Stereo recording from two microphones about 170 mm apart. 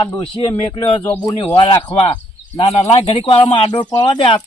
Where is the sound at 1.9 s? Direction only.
35° left (ahead or behind).